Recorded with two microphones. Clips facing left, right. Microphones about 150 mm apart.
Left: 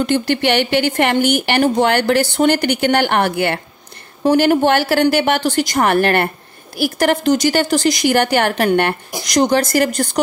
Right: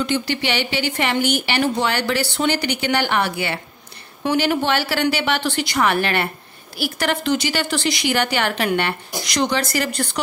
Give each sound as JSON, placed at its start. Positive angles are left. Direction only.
{"t": 0.0, "sound": "a woman's voice", "side_deg": 50}
{"t": 4.2, "sound": "a woman's voice", "side_deg": 40}